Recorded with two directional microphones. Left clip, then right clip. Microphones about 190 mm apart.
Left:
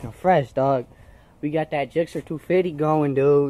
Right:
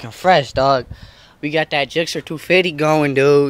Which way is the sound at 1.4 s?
15° right (ahead or behind).